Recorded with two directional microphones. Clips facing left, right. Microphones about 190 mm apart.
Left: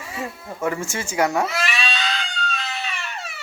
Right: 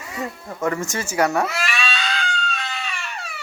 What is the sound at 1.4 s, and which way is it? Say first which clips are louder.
Cat: even; centre (ahead or behind).